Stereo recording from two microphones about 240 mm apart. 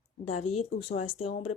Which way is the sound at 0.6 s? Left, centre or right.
Left.